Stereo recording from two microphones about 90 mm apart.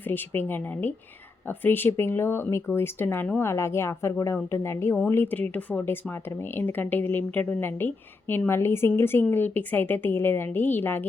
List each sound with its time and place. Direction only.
0.0 s speech: 25° left (ahead or behind)